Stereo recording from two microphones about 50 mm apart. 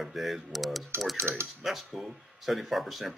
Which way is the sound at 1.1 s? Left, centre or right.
Right.